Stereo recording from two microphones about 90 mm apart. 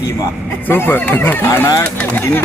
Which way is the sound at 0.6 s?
25° left (ahead or behind).